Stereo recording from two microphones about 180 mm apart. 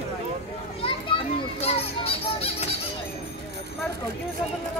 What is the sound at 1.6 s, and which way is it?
Children playing, 35° left (ahead or behind).